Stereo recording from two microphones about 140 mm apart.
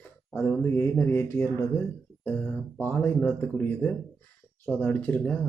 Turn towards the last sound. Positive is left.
turn(degrees=10)  # may be behind; listen again after turning